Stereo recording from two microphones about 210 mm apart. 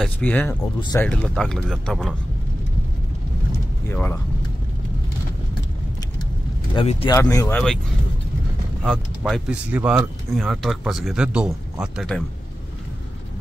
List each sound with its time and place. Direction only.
0.0 s speech: 5° left (ahead or behind)
0.7 s speech: 20° left (ahead or behind)
1.0 s speech: 5° left (ahead or behind)
3.9 s speech: 10° left (ahead or behind)
6.7 s speech: 25° left (ahead or behind)
7.2 s speech: 15° left (ahead or behind)
8.8 s speech: centre (ahead or behind)